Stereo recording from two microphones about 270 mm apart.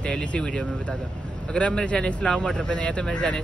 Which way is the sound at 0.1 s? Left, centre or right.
Centre.